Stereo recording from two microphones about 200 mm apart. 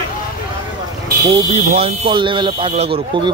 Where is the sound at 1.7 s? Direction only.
25° right (ahead or behind).